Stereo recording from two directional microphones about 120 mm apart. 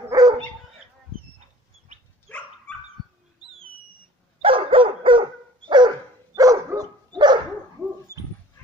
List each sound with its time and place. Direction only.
0.1 s dog: 30° right (ahead or behind)
2.3 s dog: 10° left (ahead or behind)
4.4 s dog: 50° right (ahead or behind)
8.1 s dog: 25° right (ahead or behind)